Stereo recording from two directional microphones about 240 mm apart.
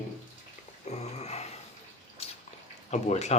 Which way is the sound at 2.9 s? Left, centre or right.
Left.